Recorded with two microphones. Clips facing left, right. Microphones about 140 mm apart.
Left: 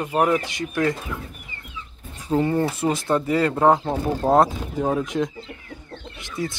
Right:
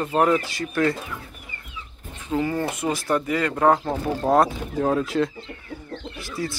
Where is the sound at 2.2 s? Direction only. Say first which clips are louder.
Left 3 dB; 30° left (ahead or behind).